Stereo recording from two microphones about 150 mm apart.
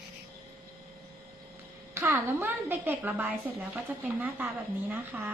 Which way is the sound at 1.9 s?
15° right (ahead or behind).